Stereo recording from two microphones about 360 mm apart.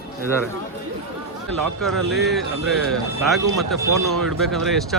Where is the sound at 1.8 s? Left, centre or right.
Centre.